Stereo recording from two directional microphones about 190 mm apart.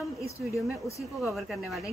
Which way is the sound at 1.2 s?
Centre (ahead or behind).